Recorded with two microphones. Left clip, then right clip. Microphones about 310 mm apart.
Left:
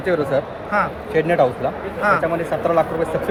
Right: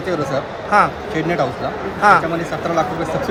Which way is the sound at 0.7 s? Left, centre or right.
Centre.